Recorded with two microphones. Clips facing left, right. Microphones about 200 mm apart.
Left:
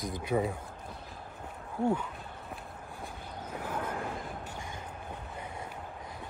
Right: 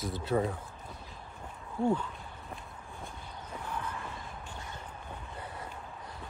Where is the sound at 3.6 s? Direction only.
90° left.